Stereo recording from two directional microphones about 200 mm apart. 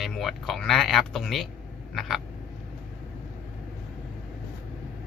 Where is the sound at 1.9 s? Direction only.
Centre (ahead or behind).